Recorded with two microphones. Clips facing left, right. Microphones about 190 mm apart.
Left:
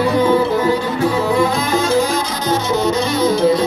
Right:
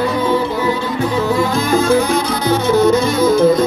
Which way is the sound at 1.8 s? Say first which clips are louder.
Right 2 dB; 60° right (ahead or behind).